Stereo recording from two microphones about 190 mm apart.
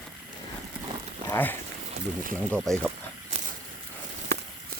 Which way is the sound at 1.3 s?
10° left (ahead or behind).